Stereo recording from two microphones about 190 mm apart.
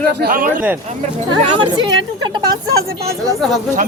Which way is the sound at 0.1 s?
55° right (ahead or behind).